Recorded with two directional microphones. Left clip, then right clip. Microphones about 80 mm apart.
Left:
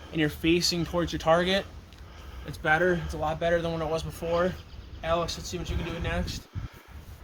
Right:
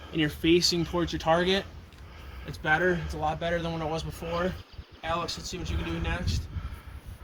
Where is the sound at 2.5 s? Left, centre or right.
Left.